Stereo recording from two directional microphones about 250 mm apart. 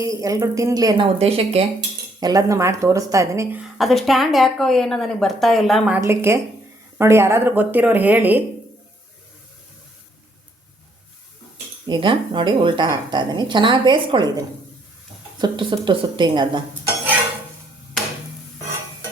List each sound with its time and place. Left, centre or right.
0.0 s speech: centre
11.9 s a woman's voice: centre